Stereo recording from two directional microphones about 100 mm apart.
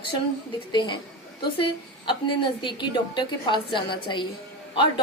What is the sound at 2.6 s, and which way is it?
A woman's voice, 50° left (ahead or behind).